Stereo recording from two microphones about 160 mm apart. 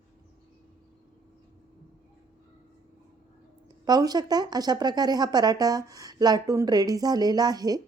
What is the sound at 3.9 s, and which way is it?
Speech, 25° right (ahead or behind).